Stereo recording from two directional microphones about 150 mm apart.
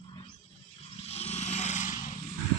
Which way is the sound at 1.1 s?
45° left (ahead or behind).